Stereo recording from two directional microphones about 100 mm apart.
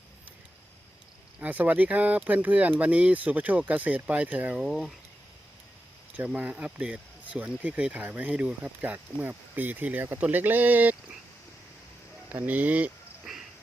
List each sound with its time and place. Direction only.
1.4 s speech: 15° right (ahead or behind)
4.6 s speech: centre (ahead or behind)
6.1 s speech: 10° right (ahead or behind)
12.5 s speech: 15° right (ahead or behind)